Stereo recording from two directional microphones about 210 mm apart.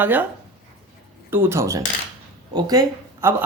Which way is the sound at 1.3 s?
10° right (ahead or behind).